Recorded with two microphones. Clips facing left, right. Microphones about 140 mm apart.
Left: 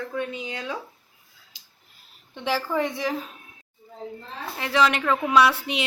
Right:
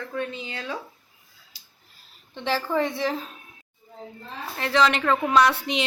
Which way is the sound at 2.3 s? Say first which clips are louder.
Even; 10° left (ahead or behind).